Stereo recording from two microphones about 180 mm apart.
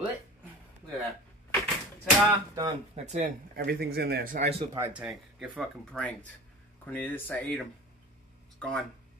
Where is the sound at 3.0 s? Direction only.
40° right (ahead or behind).